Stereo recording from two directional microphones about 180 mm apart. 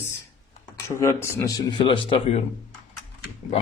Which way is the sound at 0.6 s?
15° left (ahead or behind).